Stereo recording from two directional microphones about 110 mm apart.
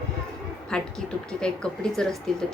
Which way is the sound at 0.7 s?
5° left (ahead or behind).